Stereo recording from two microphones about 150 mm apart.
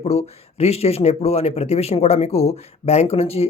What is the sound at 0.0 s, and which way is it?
Speech, 45° left (ahead or behind).